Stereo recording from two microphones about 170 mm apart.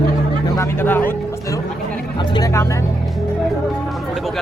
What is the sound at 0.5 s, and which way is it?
Speech, 15° left (ahead or behind).